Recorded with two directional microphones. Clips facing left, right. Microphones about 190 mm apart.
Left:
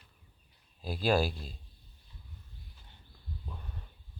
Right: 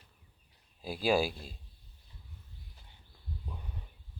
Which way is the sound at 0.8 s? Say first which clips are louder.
Even; 10° right (ahead or behind).